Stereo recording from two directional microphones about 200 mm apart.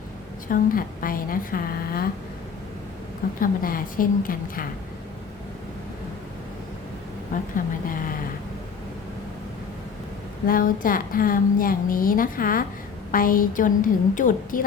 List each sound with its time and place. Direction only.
0.4 s a woman's voice: 45° left (ahead or behind)
3.4 s a woman's voice: 45° left (ahead or behind)
7.5 s a woman's voice: 45° left (ahead or behind)
10.4 s a woman's voice: 45° left (ahead or behind)